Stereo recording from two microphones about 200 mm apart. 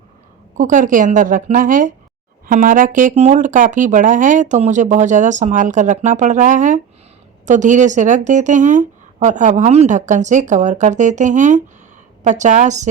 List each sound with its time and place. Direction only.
0.5 s speech: 40° right (ahead or behind)